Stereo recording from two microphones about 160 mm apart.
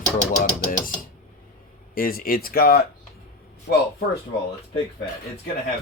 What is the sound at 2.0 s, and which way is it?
Speech, 65° left (ahead or behind).